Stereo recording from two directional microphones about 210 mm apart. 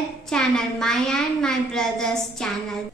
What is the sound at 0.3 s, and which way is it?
A woman's voice, 5° left (ahead or behind).